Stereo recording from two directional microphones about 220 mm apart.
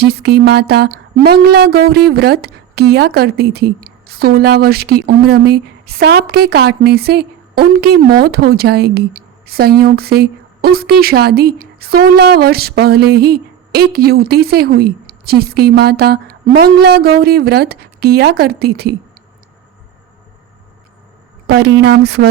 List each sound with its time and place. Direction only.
0.0 s speech: 45° right (ahead or behind)
21.4 s speech: 50° right (ahead or behind)